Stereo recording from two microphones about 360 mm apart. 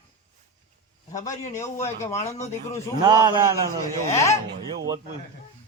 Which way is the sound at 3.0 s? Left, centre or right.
Centre.